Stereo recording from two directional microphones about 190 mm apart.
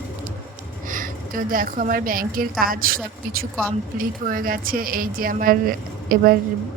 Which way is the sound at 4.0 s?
45° right (ahead or behind).